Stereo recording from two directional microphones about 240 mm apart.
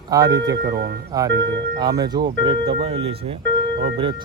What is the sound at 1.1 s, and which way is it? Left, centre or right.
Speech, centre.